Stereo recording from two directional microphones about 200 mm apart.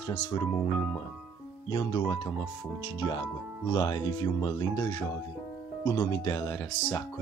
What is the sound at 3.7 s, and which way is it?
Speech, 20° left (ahead or behind).